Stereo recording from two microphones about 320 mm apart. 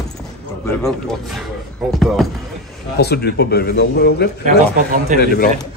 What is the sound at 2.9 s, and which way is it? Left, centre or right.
Speech, left.